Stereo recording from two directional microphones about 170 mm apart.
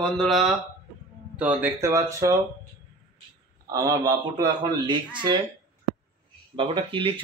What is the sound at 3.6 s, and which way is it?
Speech, 20° right (ahead or behind).